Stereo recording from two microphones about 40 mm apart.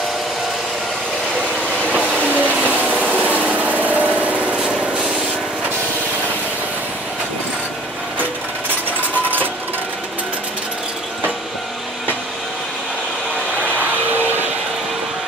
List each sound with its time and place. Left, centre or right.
2.1 s train: left
3.2 s a sound: right
3.8 s lawn mower: right
13.7 s vehicle: right